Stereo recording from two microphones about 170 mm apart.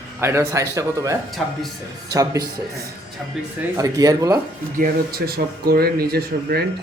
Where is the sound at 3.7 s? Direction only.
20° right (ahead or behind).